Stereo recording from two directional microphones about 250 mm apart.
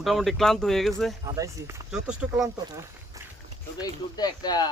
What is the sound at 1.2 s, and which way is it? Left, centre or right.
Speech, centre.